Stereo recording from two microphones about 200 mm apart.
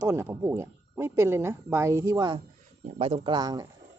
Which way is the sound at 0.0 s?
15° right (ahead or behind).